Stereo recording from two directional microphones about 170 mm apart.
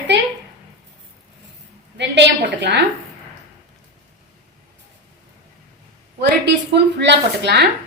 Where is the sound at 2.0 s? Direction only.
90° right.